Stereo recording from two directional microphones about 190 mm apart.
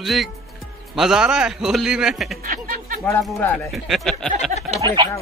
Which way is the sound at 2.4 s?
50° right (ahead or behind).